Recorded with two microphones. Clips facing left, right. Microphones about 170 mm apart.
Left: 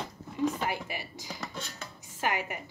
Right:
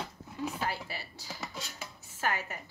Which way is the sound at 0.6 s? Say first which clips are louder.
Left 3 dB; 15° left (ahead or behind).